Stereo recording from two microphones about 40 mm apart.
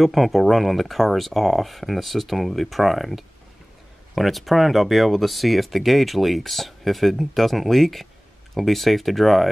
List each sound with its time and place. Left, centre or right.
0.0 s speech: centre